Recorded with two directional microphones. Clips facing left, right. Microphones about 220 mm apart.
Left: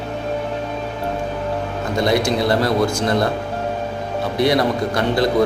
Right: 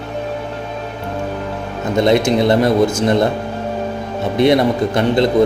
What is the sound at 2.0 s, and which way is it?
Speech, 20° right (ahead or behind).